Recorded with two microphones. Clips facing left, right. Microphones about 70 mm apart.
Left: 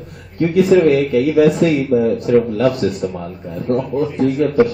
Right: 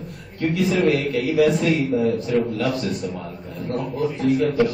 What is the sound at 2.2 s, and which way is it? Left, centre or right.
Speech, left.